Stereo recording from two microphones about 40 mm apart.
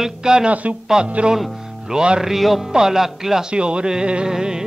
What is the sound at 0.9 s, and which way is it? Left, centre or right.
Speech, right.